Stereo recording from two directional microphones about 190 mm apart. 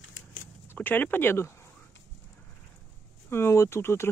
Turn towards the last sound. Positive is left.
turn(degrees=15)  # may be behind; listen again after turning